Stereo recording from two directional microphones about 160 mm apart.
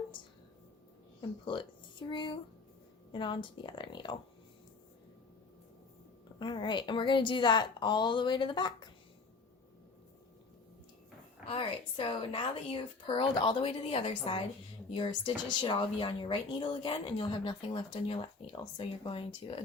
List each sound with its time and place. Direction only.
1.5 s a woman's voice: 30° left (ahead or behind)
6.4 s a woman's voice: 30° left (ahead or behind)
11.4 s speech: 35° left (ahead or behind)